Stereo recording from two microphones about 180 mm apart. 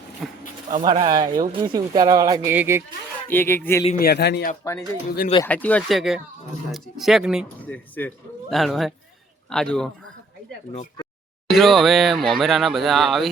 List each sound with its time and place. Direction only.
0.2 s a sound: centre (ahead or behind)
0.7 s speech: 45° right (ahead or behind)
1.0 s speech: 20° right (ahead or behind)
3.2 s speech: 10° left (ahead or behind)
3.9 s a man's voice: 60° left (ahead or behind)
5.5 s speech: 10° left (ahead or behind)
7.4 s speech: 10° left (ahead or behind)
11.4 s speech: centre (ahead or behind)